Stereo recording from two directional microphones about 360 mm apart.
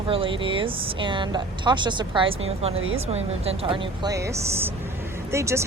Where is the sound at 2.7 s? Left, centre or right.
Right.